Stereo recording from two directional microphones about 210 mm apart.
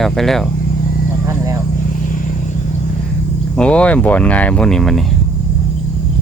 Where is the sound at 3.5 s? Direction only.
5° left (ahead or behind).